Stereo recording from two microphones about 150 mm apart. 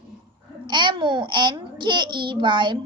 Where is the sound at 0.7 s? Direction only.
30° right (ahead or behind).